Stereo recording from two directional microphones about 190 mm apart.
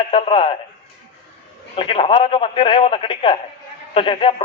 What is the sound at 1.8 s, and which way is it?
Speech, 30° left (ahead or behind).